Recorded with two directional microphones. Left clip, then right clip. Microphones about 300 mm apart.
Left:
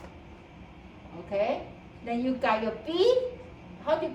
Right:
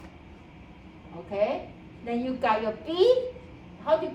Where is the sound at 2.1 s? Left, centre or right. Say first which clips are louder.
Right 1 dB; centre.